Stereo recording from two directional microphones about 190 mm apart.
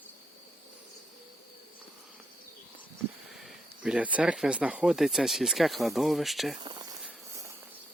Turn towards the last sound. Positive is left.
turn(degrees=-25)  # may be behind; listen again after turning